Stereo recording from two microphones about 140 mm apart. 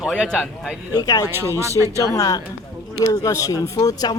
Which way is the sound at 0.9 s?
25° left (ahead or behind).